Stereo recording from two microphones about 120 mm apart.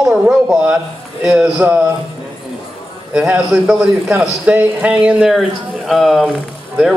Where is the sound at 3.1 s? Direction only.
5° right (ahead or behind).